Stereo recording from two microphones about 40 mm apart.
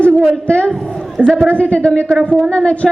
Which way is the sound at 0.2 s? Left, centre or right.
Left.